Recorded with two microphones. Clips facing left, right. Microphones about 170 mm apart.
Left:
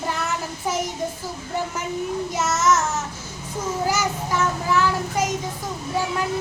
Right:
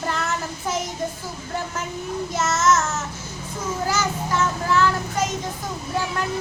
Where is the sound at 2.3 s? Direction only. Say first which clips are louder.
Right 1 dB; 15° left (ahead or behind).